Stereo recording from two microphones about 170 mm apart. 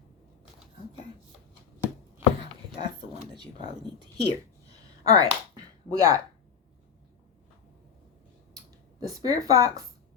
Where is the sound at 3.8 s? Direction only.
25° right (ahead or behind).